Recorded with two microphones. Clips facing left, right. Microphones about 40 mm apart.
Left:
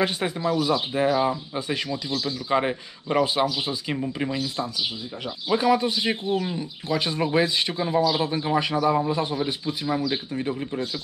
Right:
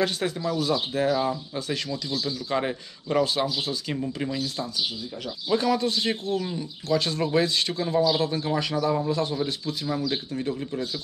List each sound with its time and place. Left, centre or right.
0.0 s a man's voice: left